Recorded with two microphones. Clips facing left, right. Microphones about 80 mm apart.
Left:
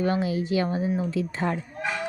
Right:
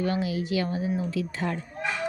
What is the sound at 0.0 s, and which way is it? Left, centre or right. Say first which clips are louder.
A woman's voice: left 3 dB; left.